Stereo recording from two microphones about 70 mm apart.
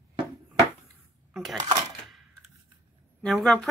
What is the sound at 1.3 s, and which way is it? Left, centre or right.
Dishes, centre.